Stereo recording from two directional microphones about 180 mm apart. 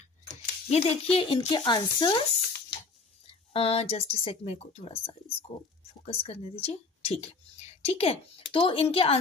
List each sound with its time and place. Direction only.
0.3 s a sound: 35° left (ahead or behind)
1.1 s speech: 30° left (ahead or behind)
3.3 s speech: 35° left (ahead or behind)